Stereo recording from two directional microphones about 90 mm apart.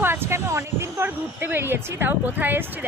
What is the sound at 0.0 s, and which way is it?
Speech, 25° right (ahead or behind).